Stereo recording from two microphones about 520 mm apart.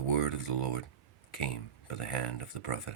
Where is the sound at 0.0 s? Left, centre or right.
Left.